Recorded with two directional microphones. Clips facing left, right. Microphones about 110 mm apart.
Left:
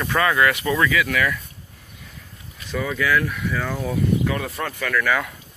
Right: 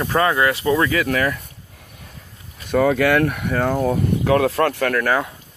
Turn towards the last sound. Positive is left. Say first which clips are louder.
# right 4 dB
turn(degrees=-55)  # may be behind; listen again after turning